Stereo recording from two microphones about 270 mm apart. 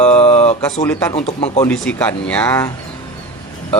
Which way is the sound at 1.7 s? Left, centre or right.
Centre.